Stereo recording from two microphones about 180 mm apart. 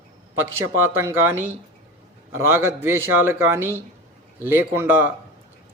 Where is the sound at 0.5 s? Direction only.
15° right (ahead or behind).